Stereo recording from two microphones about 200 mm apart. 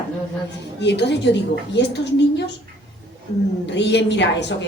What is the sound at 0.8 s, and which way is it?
A woman's voice, 60° left (ahead or behind).